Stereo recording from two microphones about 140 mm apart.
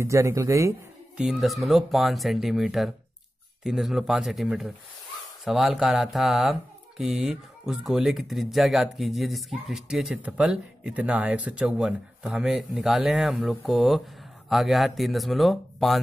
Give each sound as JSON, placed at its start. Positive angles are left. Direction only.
{"t": 0.0, "sound": "speech", "side_deg": -20}
{"t": 1.1, "sound": "speech", "side_deg": -5}